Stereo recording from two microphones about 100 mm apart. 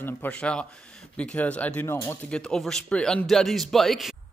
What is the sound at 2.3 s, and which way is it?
Speech, 5° left (ahead or behind).